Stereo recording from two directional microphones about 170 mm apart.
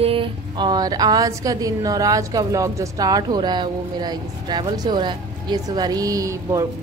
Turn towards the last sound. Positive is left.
turn(degrees=-20)  # may be behind; listen again after turning